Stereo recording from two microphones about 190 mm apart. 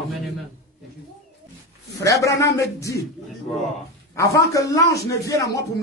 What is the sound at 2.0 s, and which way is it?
A man's voice, 15° left (ahead or behind).